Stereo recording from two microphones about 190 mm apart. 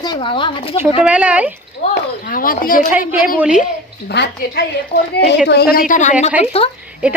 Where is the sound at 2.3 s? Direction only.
45° left (ahead or behind).